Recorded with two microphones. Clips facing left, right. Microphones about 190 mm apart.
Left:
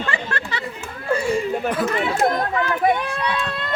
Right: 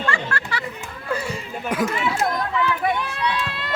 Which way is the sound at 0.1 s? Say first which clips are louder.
Even; 20° left (ahead or behind).